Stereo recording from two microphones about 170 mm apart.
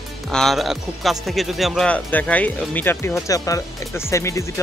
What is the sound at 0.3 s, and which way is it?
Speech, centre (ahead or behind).